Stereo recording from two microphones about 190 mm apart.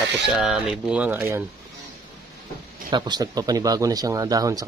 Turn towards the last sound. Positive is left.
turn(degrees=-20)  # may be behind; listen again after turning